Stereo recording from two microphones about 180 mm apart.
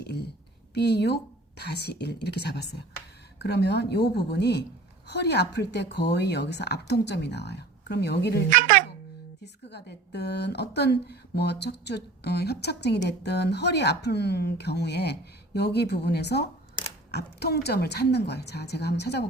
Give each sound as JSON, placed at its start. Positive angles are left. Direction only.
{"t": 0.0, "sound": "a woman's voice", "side_deg": 65}
{"t": 8.4, "sound": "a child's voice", "side_deg": -45}
{"t": 9.4, "sound": "a woman's voice", "side_deg": 70}